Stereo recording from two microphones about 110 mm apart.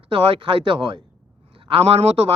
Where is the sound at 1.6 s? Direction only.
60° right (ahead or behind).